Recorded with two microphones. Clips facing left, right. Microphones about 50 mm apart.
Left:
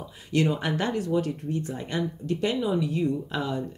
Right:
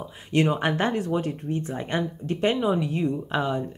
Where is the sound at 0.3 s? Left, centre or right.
Right.